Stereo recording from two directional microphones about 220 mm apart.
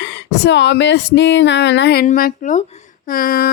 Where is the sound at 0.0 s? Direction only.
55° left (ahead or behind).